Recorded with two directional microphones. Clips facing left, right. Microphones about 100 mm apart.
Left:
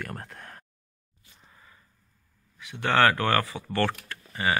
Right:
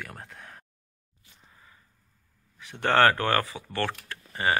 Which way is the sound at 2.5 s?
40° right (ahead or behind).